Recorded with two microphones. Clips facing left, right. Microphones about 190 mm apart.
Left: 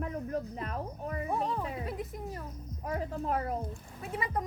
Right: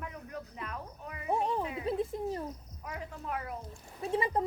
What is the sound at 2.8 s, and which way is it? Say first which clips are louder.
Speech: left 8 dB; 40° left (ahead or behind).